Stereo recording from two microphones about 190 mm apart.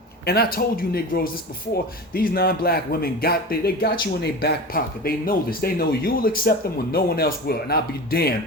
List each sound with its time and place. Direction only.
0.3 s speech: 55° left (ahead or behind)